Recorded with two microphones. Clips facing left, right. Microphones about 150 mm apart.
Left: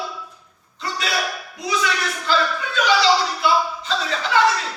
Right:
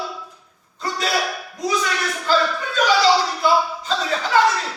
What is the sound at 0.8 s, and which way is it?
Hiccup, 40° right (ahead or behind).